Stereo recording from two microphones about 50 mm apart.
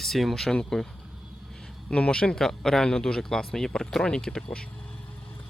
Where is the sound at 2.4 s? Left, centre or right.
Centre.